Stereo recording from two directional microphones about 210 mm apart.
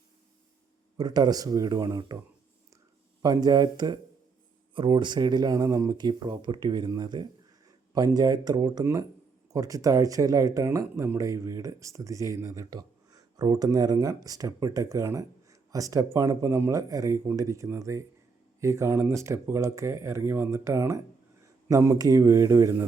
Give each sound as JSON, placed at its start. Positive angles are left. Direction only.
{"t": 0.9, "sound": "speech", "side_deg": -20}
{"t": 3.2, "sound": "speech", "side_deg": -20}